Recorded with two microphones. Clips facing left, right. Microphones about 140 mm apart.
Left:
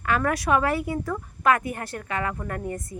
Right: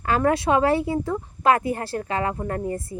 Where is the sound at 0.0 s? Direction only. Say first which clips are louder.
Right 4 dB; 30° right (ahead or behind).